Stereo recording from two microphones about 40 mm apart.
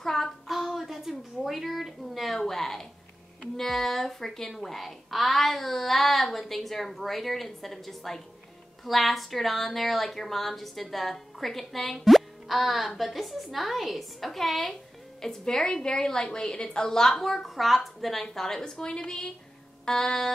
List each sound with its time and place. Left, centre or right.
0.0 s child singing: centre
0.5 s a sound: centre
3.5 s a woman's voice: centre